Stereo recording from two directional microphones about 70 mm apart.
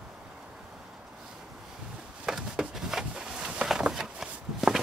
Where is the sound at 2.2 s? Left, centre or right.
Centre.